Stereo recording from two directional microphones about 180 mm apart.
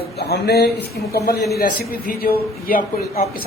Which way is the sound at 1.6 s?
55° left (ahead or behind).